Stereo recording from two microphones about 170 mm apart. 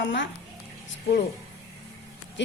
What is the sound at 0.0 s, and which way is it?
Speech, 90° left.